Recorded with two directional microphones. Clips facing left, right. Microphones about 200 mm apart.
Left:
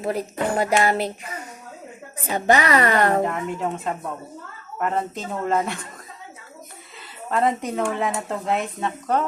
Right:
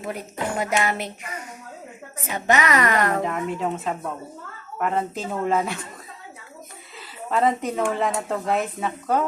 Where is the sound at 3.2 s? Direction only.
Centre (ahead or behind).